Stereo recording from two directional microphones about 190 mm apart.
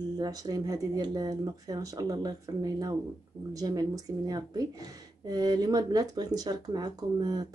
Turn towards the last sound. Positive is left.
turn(degrees=-20)  # may be behind; listen again after turning